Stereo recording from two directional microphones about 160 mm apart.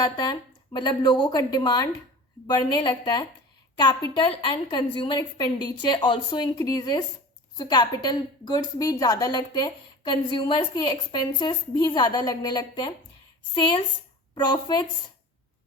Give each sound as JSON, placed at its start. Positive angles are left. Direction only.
{"t": 0.0, "sound": "a woman's voice", "side_deg": 25}